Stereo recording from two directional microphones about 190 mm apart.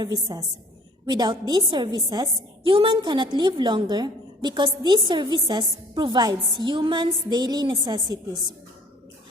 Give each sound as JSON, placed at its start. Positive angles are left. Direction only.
{"t": 0.0, "sound": "a woman's voice", "side_deg": -20}